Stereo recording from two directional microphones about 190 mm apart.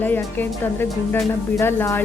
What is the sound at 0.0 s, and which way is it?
A woman's voice, 10° left (ahead or behind).